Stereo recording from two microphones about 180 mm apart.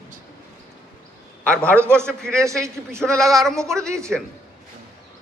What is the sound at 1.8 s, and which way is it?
A man's voice, 15° right (ahead or behind).